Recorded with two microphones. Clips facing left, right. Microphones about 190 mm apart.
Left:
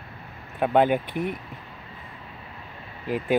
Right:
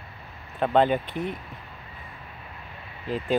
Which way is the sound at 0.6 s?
10° left (ahead or behind).